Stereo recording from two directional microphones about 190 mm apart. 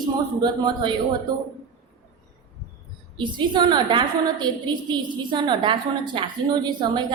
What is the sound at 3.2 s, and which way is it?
A woman's voice, 25° right (ahead or behind).